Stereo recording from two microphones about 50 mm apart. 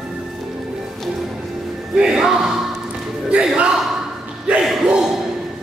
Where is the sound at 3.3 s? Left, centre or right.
Right.